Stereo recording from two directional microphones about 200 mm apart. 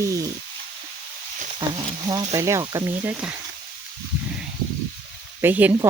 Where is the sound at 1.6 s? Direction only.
20° right (ahead or behind).